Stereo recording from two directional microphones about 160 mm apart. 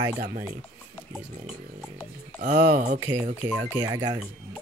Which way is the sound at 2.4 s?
50° right (ahead or behind).